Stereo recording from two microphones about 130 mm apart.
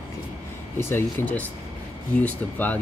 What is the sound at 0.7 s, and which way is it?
Speech, 20° left (ahead or behind).